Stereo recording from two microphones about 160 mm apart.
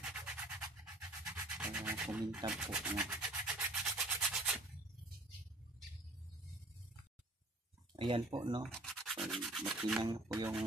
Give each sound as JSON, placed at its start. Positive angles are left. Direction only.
{"t": 0.0, "sound": "music", "side_deg": -5}
{"t": 1.2, "sound": "rub", "side_deg": -10}
{"t": 7.9, "sound": "speech", "side_deg": -30}
{"t": 8.6, "sound": "rub", "side_deg": 5}
{"t": 9.8, "sound": "music", "side_deg": 0}
{"t": 10.0, "sound": "speech", "side_deg": -20}